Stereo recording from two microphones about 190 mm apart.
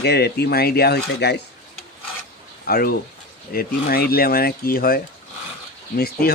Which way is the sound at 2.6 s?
55° left (ahead or behind).